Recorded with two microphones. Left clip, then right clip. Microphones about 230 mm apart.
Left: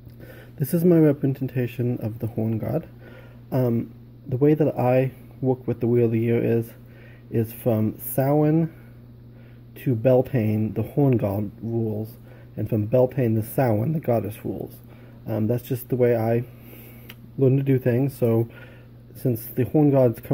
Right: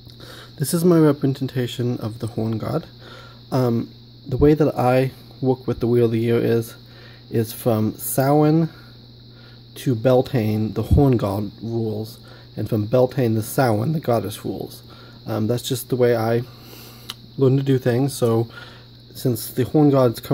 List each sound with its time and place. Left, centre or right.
0.3 s speech: centre
9.8 s speech: centre